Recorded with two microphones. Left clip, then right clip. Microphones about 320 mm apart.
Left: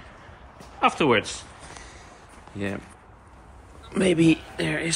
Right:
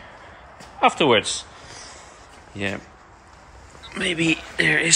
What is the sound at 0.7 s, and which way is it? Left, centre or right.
Speech, centre.